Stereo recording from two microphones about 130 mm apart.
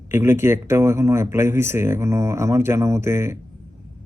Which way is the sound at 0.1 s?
20° right (ahead or behind).